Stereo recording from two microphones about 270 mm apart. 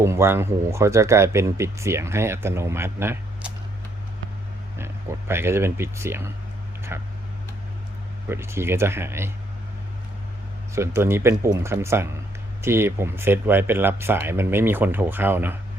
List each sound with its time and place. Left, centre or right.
0.0 s speech: centre
4.8 s speech: centre
8.3 s speech: centre
10.8 s speech: centre